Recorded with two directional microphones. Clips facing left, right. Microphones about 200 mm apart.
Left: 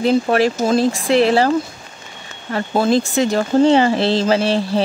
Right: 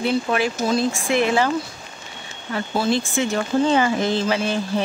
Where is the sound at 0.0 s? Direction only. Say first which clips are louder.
Left 6 dB; 40° left (ahead or behind).